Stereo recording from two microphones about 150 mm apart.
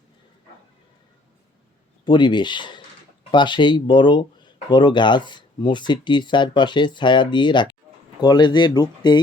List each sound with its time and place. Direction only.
2.0 s speech: 30° left (ahead or behind)